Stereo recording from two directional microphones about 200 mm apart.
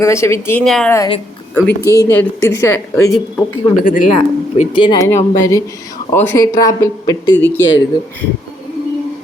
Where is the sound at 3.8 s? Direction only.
40° left (ahead or behind).